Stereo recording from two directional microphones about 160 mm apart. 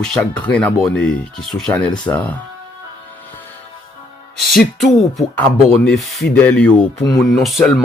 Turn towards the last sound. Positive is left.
turn(degrees=0)  # may be behind; listen again after turning